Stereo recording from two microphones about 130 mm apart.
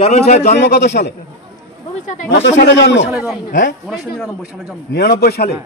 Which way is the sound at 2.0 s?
70° left (ahead or behind).